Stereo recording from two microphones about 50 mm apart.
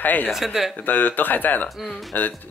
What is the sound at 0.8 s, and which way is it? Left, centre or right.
Speech, left.